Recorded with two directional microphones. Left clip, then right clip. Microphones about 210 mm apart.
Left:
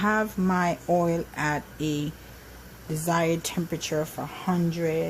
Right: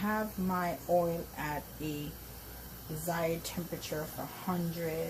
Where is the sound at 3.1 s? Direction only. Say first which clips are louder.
Left 9 dB; 55° left (ahead or behind).